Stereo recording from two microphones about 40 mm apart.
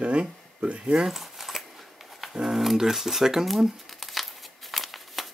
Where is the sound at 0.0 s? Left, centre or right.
Right.